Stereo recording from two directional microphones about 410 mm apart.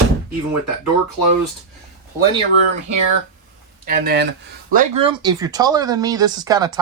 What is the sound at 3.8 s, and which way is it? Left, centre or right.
Speech, centre.